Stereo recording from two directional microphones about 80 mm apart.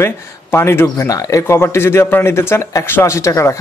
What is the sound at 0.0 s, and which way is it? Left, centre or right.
Speech, left.